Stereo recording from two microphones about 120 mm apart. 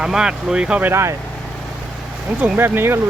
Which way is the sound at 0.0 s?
5° right (ahead or behind).